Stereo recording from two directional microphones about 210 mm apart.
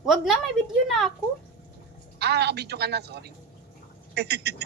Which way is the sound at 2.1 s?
50° right (ahead or behind).